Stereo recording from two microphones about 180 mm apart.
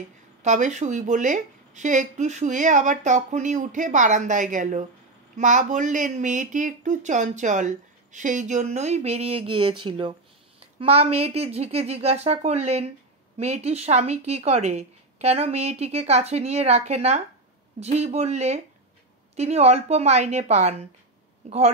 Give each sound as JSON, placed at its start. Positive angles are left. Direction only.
{"t": 0.4, "sound": "speech", "side_deg": -40}